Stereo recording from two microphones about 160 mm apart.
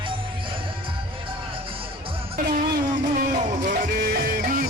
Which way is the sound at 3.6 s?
65° right (ahead or behind).